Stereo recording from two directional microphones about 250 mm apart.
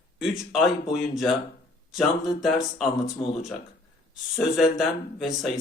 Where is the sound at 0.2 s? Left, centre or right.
Centre.